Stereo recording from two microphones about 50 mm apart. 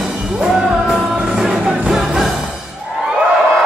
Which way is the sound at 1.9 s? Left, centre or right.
Centre.